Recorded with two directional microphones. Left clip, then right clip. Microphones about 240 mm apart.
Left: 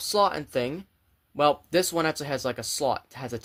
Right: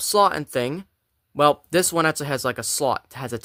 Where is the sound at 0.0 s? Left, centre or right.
Right.